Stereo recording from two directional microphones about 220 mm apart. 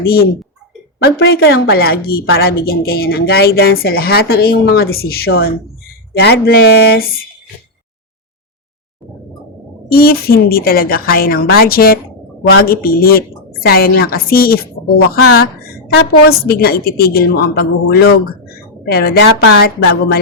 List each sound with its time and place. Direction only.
0.0 s a woman's voice: 45° left (ahead or behind)
9.9 s a woman's voice: 45° left (ahead or behind)